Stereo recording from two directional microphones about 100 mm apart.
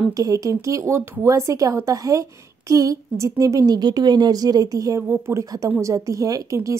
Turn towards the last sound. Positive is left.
turn(degrees=-30)  # may be behind; listen again after turning